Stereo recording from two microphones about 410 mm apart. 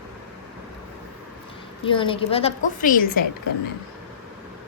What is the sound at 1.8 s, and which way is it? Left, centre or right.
A woman's voice, centre.